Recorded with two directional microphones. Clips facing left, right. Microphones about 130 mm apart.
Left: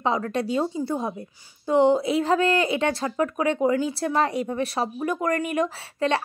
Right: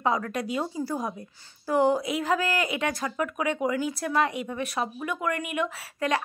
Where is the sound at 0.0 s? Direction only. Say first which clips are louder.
Left 2 dB; 25° left (ahead or behind).